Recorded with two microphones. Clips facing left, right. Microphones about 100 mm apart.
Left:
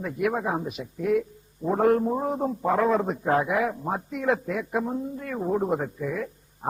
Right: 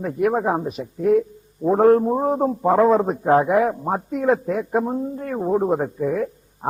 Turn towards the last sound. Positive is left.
turn(degrees=-40)  # may be behind; listen again after turning